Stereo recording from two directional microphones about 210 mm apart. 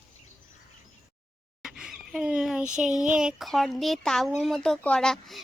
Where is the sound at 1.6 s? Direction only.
5° right (ahead or behind).